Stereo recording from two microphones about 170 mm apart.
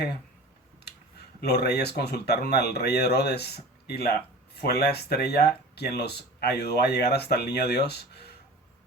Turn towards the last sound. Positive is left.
turn(degrees=75)  # may be behind; listen again after turning